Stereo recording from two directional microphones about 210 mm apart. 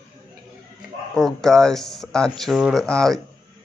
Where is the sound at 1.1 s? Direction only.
Centre (ahead or behind).